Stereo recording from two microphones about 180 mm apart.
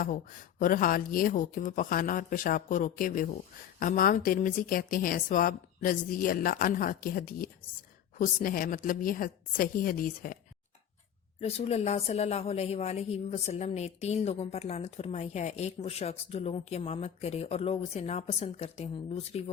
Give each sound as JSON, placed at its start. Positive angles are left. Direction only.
{"t": 0.0, "sound": "speech", "side_deg": 50}
{"t": 11.3, "sound": "a woman's voice", "side_deg": 35}